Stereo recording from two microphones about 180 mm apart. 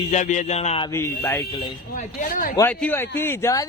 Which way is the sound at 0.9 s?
15° left (ahead or behind).